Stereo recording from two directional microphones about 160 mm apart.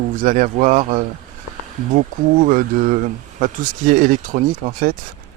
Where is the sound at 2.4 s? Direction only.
55° right (ahead or behind).